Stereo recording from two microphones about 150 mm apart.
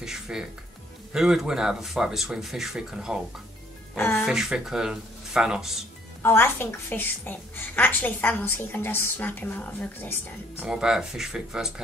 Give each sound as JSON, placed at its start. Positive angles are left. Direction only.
{"t": 0.0, "sound": "speech", "side_deg": -5}
{"t": 3.9, "sound": "a woman's voice", "side_deg": 15}
{"t": 4.2, "sound": "speech", "side_deg": -5}
{"t": 6.2, "sound": "a woman's voice", "side_deg": 15}
{"t": 10.6, "sound": "speech", "side_deg": -5}